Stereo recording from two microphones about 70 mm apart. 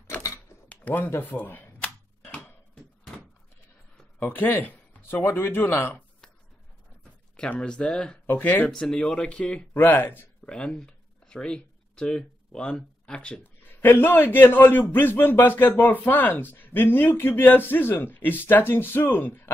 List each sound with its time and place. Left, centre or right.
0.7 s a sound: left
1.3 s camera: left
2.3 s a sound: centre
4.2 s a man's voice: left
7.3 s speech: centre
8.3 s a man's voice: left
8.6 s speech: centre
9.8 s a man's voice: left
10.4 s speech: centre
13.7 s a man's voice: left